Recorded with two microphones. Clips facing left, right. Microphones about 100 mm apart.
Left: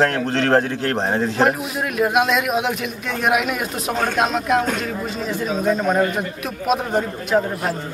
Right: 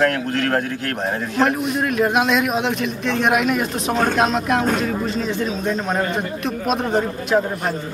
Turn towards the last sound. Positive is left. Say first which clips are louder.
# right 1 dB
turn(degrees=0)  # may be behind; listen again after turning